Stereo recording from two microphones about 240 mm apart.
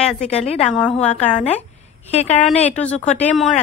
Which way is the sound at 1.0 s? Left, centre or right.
Left.